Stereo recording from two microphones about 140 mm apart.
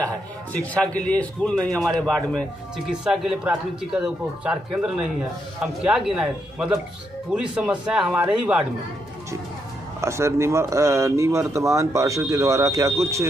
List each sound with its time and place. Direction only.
0.0 s speech: 10° left (ahead or behind); by 8.6 s 10° right (ahead or behind)
10.0 s speech: 20° right (ahead or behind)